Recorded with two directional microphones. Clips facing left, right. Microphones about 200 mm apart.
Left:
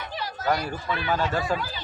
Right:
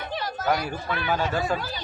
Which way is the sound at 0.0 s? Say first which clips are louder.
Right 3 dB; 50° right (ahead or behind).